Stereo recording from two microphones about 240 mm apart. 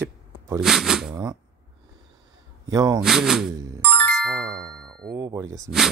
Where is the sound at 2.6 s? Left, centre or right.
Centre.